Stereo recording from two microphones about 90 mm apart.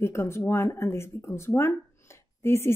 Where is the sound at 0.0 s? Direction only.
30° left (ahead or behind).